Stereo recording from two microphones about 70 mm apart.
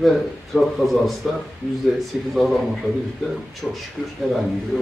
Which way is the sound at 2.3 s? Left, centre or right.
Centre.